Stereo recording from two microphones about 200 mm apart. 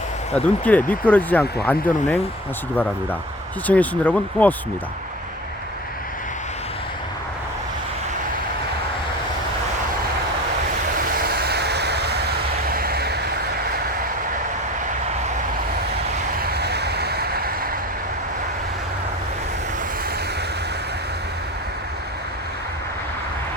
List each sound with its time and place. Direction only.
0.3 s speech: 5° left (ahead or behind)
10.9 s vehicle: 45° right (ahead or behind)
16.4 s vehicle: 55° right (ahead or behind)